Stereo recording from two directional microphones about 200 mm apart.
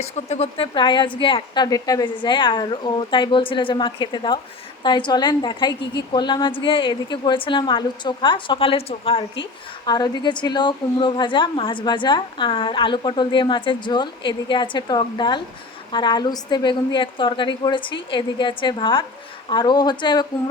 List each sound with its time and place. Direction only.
0.0 s speech: 30° left (ahead or behind)